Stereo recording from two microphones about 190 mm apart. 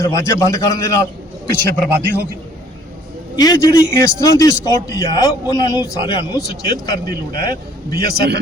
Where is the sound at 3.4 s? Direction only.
20° left (ahead or behind).